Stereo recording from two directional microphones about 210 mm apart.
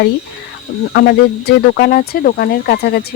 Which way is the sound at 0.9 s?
50° left (ahead or behind).